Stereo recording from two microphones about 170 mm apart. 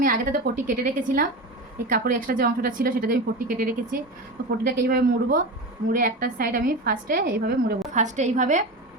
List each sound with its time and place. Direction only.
0.0 s a woman's voice: 55° right (ahead or behind)
7.9 s a woman's voice: 45° right (ahead or behind)